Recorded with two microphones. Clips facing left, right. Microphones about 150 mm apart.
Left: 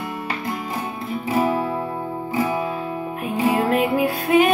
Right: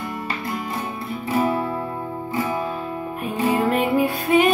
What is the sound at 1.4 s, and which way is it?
Guitar, 15° left (ahead or behind).